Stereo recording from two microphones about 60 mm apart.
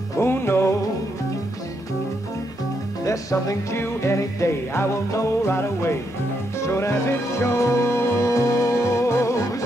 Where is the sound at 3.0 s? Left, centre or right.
Left.